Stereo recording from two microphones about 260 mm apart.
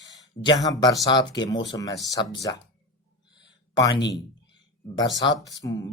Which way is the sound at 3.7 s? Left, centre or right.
Centre.